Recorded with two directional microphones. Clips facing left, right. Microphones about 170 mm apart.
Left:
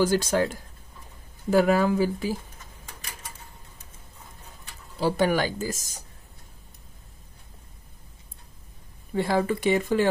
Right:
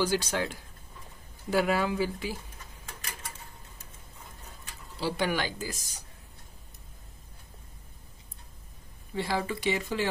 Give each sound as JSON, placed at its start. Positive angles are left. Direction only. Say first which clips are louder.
{"t": 0.0, "sound": "speech", "louder": "left 6 dB", "side_deg": 45}
{"t": 4.9, "sound": "speech", "louder": "left 7 dB", "side_deg": 45}
{"t": 9.1, "sound": "speech", "louder": "left 7 dB", "side_deg": 50}